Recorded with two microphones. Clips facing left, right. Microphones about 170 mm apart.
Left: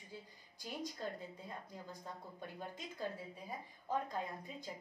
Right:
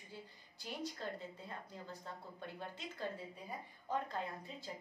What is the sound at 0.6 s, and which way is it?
A woman's voice, 10° left (ahead or behind).